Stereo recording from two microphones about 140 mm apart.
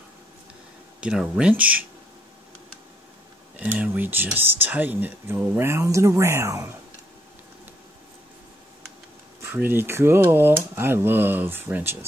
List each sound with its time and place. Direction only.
1.0 s speech: 5° right (ahead or behind)
3.5 s speech: 10° right (ahead or behind)
9.4 s speech: 15° right (ahead or behind)